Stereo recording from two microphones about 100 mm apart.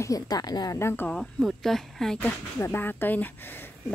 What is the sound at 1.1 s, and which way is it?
Speech, 5° left (ahead or behind).